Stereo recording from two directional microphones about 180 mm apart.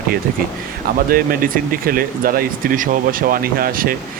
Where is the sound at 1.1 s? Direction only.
55° right (ahead or behind).